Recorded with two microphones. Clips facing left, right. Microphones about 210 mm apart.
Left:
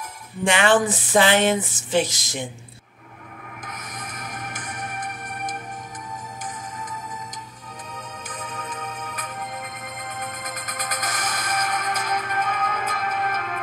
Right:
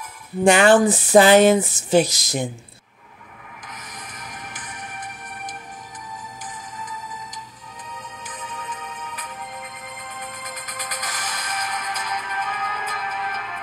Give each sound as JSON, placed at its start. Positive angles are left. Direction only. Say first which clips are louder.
{"t": 0.5, "sound": "speech", "louder": "right 5 dB", "side_deg": -40}
{"t": 3.6, "sound": "music", "louder": "left 3 dB", "side_deg": 50}
{"t": 8.4, "sound": "music", "louder": "left 1 dB", "side_deg": 45}